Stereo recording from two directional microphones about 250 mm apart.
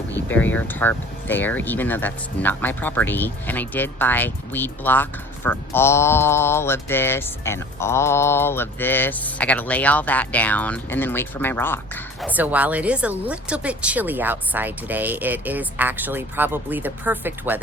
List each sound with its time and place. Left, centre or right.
0.3 s speech: centre
12.2 s speech: centre